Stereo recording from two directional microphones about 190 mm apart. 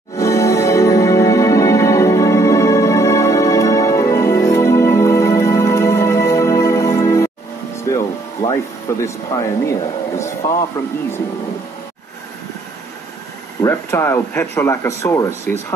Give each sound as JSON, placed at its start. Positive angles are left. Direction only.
{"t": 0.2, "sound": "music", "side_deg": 15}
{"t": 7.7, "sound": "a sound", "side_deg": 15}
{"t": 9.0, "sound": "speech", "side_deg": 15}
{"t": 13.6, "sound": "speech", "side_deg": 15}